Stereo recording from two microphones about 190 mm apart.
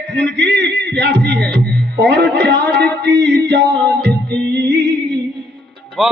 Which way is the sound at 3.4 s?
65° right (ahead or behind).